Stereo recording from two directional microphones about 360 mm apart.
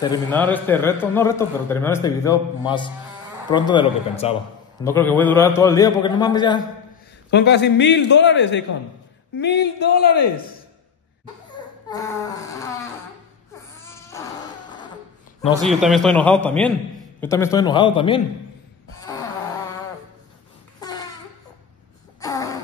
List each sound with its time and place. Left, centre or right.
0.0 s a man's voice: centre
7.2 s a man's voice: left
11.5 s baby cry: centre
13.8 s baby cry: centre
15.4 s a man's voice: centre
20.8 s a sound: centre
22.2 s a sound: centre